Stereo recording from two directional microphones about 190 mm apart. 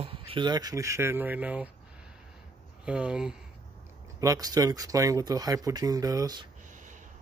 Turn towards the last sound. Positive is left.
turn(degrees=-20)  # may be behind; listen again after turning